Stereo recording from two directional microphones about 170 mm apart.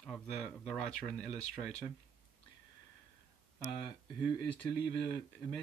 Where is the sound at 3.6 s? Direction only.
25° left (ahead or behind).